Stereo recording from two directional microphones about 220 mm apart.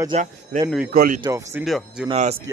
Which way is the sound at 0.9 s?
40° right (ahead or behind).